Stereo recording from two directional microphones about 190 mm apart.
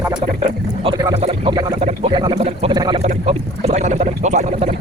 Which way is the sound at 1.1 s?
35° right (ahead or behind).